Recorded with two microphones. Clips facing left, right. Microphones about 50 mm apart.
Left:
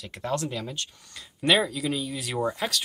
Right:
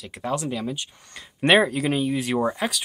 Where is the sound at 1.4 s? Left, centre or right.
Right.